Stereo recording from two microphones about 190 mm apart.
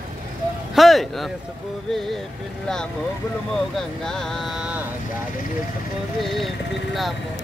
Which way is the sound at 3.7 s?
Centre (ahead or behind).